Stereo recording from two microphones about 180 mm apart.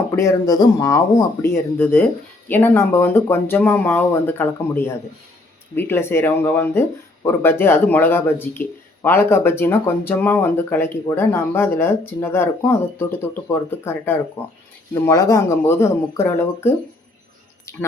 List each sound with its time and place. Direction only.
0.2 s speech: 20° left (ahead or behind)